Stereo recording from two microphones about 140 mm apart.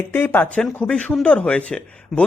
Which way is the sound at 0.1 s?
15° left (ahead or behind).